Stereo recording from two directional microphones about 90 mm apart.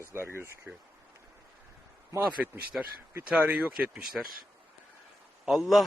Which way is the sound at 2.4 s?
15° right (ahead or behind).